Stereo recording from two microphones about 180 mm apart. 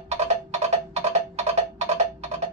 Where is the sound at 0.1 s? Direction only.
35° right (ahead or behind).